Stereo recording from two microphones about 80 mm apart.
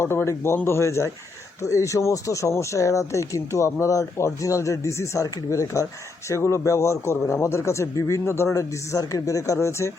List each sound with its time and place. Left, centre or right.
0.0 s speech: left